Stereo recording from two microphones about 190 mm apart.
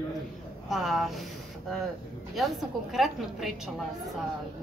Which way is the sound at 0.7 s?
Centre (ahead or behind).